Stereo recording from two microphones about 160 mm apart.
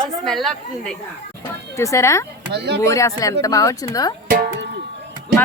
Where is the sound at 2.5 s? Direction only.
90° right.